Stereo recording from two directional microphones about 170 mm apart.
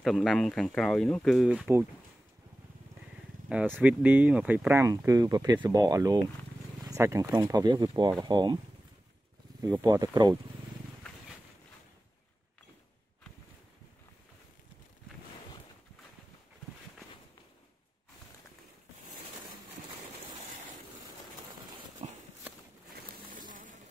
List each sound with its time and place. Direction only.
0.0 s speech: centre (ahead or behind)
3.4 s speech: 5° right (ahead or behind); by 8.5 s 25° right (ahead or behind)
9.6 s speech: 20° right (ahead or behind)
22.0 s walk: 40° right (ahead or behind)
23.5 s a sound: 50° right (ahead or behind)